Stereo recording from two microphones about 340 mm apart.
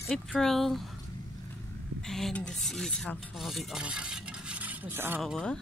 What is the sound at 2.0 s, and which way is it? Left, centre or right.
Speech, centre.